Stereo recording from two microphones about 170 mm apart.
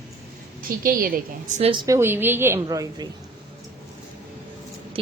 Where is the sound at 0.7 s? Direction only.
55° right (ahead or behind).